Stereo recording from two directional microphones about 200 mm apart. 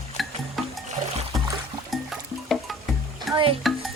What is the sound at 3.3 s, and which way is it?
Music, 25° right (ahead or behind).